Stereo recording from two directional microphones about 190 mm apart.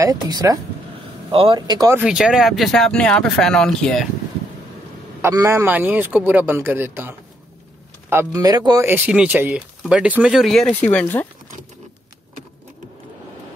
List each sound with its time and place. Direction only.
0.0 s speech: 20° right (ahead or behind)
2.0 s speech: 5° right (ahead or behind)
5.2 s speech: 15° right (ahead or behind); by 11.2 s 5° left (ahead or behind)